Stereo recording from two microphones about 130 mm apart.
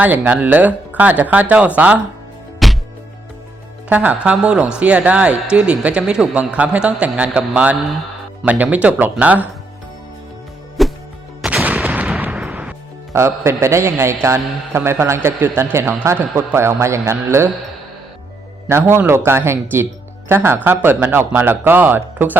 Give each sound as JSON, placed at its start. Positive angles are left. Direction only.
{"t": 0.0, "sound": "speech", "side_deg": -10}
{"t": 2.6, "sound": "music", "side_deg": 0}
{"t": 3.8, "sound": "speech", "side_deg": -10}
{"t": 10.8, "sound": "music", "side_deg": 0}
{"t": 11.4, "sound": "gunshot", "side_deg": -10}
{"t": 13.1, "sound": "a man's voice", "side_deg": -20}
{"t": 18.7, "sound": "a man's voice", "side_deg": -20}